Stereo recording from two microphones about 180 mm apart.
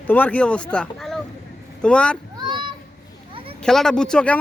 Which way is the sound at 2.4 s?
25° right (ahead or behind).